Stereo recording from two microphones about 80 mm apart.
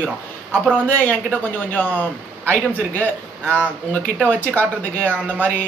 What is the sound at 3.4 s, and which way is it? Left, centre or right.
Speech, right.